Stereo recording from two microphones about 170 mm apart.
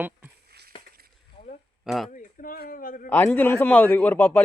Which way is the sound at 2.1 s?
55° left (ahead or behind).